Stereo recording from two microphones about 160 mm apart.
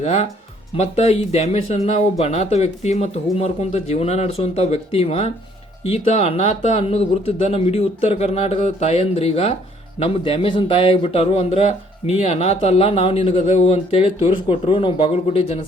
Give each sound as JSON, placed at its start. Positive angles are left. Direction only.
{"t": 0.0, "sound": "a man's voice", "side_deg": 45}